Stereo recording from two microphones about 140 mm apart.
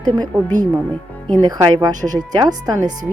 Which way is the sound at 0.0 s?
25° right (ahead or behind).